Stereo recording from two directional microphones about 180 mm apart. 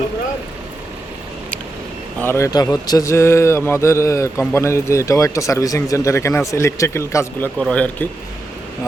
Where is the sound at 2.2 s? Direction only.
15° left (ahead or behind).